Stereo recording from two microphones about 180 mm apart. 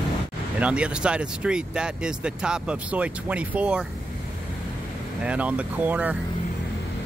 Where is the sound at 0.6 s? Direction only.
5° right (ahead or behind).